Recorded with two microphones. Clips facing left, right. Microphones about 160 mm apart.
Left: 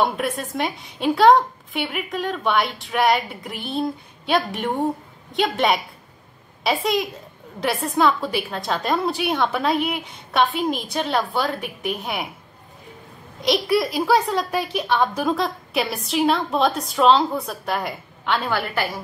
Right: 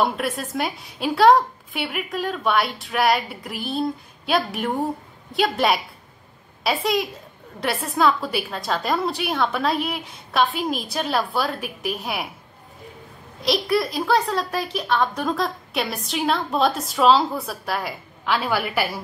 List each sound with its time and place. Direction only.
0.0 s a woman's voice: centre (ahead or behind)
13.4 s a woman's voice: centre (ahead or behind)